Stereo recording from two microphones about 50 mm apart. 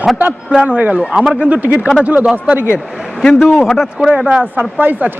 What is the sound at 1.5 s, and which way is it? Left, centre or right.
Speech, right.